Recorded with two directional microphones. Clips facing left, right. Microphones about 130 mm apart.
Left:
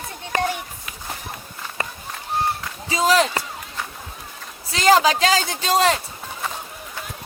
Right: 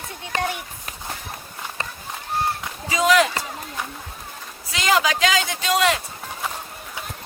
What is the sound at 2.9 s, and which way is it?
Speech, 30° left (ahead or behind).